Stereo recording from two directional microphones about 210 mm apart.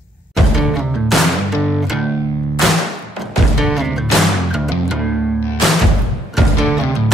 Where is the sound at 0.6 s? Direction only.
Centre (ahead or behind).